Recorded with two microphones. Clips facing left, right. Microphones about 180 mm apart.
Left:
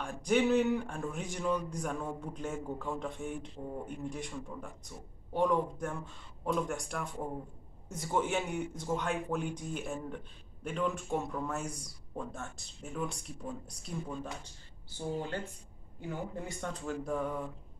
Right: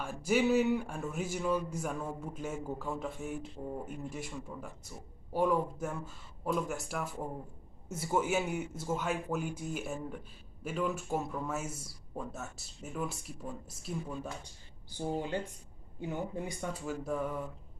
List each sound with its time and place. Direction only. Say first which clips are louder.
0.0 s speech: even; 5° right (ahead or behind)
16.6 s speech: left 2 dB; 5° right (ahead or behind)